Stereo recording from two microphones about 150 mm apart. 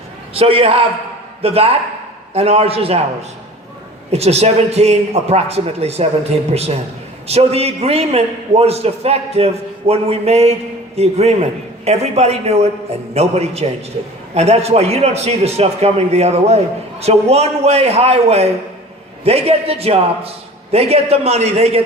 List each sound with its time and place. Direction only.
0.3 s a man's voice: 40° right (ahead or behind)
4.1 s a man's voice: 45° right (ahead or behind)